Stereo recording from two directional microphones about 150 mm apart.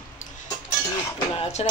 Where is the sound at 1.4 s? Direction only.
50° left (ahead or behind).